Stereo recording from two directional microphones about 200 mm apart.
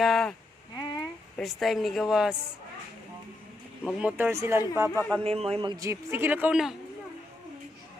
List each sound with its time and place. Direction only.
0.0 s a woman's voice: centre (ahead or behind)
0.8 s a sound: 20° left (ahead or behind)
1.4 s a woman's voice: centre (ahead or behind)
3.8 s a man's voice: 5° right (ahead or behind)
4.9 s speech: 5° left (ahead or behind)
5.2 s a man's voice: 30° right (ahead or behind); by 6.7 s 5° right (ahead or behind)